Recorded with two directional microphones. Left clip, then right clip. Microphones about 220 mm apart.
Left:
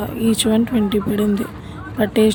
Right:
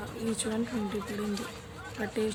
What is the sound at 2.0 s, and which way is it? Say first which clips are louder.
Speech: left 16 dB; 45° left (ahead or behind).